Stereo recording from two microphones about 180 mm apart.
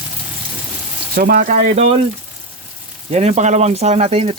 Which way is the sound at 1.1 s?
55° right (ahead or behind).